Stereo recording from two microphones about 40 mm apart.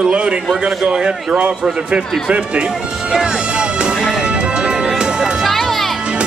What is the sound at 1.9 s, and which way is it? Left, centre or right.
Speech, right.